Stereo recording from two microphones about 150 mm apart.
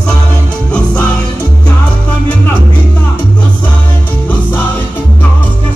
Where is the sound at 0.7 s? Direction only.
10° left (ahead or behind).